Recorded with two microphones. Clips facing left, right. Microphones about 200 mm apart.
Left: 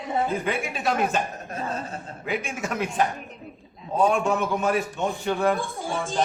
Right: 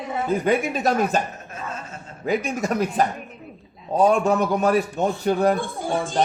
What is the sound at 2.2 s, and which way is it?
A man's voice, 40° right (ahead or behind).